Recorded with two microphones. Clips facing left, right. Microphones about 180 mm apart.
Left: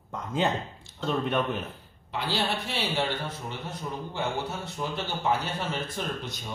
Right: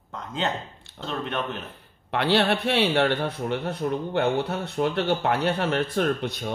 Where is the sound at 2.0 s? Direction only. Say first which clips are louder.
Right 8 dB; 65° right (ahead or behind).